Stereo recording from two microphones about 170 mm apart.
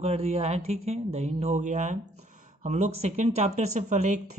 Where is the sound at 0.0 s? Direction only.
35° right (ahead or behind).